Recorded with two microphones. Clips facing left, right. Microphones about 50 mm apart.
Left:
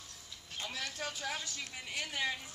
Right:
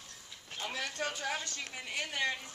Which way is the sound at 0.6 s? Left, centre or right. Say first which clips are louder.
Right 3 dB; centre.